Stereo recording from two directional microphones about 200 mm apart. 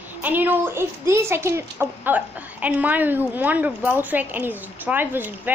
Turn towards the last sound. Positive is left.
turn(degrees=-10)  # may be behind; listen again after turning